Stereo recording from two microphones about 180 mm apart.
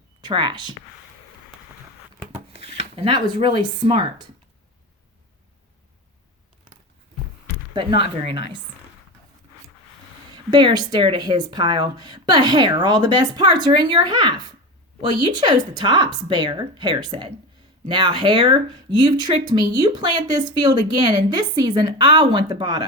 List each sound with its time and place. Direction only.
0.2 s speech: 25° right (ahead or behind)
2.5 s speech: 35° right (ahead or behind)
7.7 s speech: 25° right (ahead or behind)
10.3 s speech: 25° right (ahead or behind)